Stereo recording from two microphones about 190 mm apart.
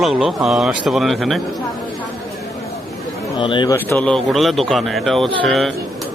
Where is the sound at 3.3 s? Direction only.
25° left (ahead or behind).